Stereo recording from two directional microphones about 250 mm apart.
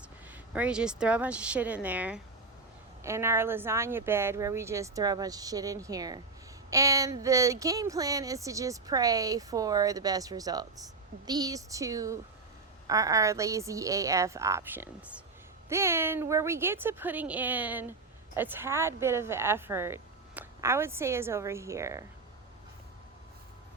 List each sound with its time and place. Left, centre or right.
0.3 s speech: centre